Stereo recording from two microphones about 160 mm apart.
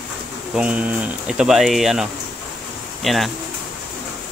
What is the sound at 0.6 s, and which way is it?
Speech, 10° right (ahead or behind).